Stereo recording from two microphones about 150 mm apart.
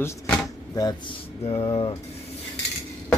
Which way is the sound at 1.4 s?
40° left (ahead or behind).